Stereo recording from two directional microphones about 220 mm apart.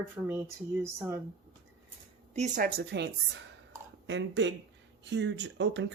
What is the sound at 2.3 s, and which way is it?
Speech, 35° right (ahead or behind).